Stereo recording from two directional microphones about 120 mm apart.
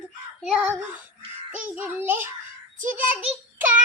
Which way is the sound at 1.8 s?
15° right (ahead or behind).